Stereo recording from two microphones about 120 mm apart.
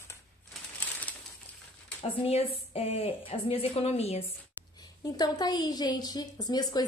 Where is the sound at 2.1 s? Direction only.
50° left (ahead or behind).